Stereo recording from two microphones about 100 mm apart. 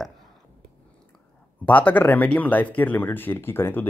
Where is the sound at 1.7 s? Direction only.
15° left (ahead or behind).